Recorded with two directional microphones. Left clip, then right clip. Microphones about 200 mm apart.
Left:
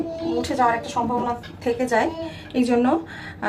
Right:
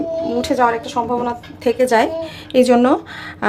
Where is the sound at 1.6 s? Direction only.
55° right (ahead or behind).